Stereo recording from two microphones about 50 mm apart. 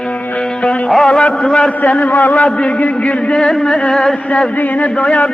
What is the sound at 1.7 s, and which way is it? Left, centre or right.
Speech, left.